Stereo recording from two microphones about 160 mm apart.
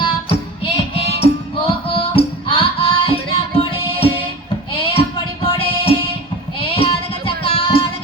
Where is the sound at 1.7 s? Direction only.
35° left (ahead or behind).